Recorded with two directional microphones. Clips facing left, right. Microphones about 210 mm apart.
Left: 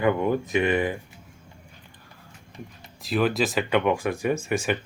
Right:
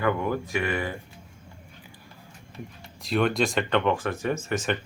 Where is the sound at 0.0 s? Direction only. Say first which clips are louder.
Left 3 dB; 20° left (ahead or behind).